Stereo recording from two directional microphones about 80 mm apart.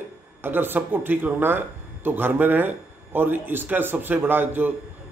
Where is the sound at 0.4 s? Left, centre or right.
Right.